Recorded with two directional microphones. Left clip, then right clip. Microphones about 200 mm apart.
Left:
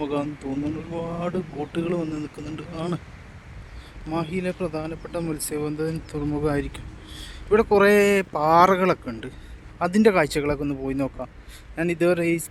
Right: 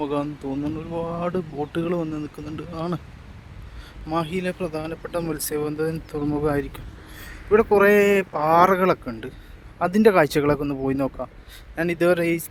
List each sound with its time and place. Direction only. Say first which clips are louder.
0.0 s speech: right 1 dB; centre (ahead or behind)
4.1 s speech: right 2 dB; 20° right (ahead or behind)